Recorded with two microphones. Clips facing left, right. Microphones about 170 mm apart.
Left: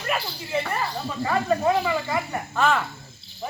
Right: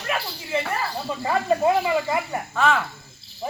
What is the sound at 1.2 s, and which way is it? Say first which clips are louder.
Speech: right 1 dB; 25° right (ahead or behind).